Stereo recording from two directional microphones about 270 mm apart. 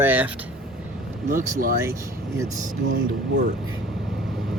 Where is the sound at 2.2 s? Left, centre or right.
Centre.